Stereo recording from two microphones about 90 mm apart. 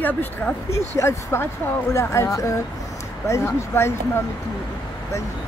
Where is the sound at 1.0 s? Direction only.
30° left (ahead or behind).